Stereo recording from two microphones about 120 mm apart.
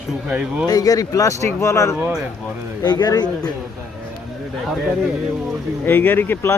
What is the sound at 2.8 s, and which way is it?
Speech, 35° left (ahead or behind).